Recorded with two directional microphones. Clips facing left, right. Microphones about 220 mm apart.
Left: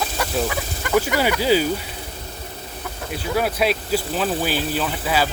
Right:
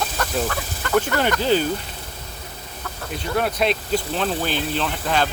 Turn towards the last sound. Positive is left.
turn(degrees=5)  # may be behind; listen again after turning